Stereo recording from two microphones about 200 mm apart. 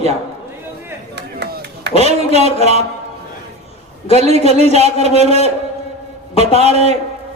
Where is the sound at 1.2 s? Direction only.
55° right (ahead or behind).